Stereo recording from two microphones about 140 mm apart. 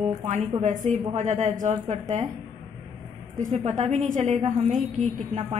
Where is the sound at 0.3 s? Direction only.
55° right (ahead or behind).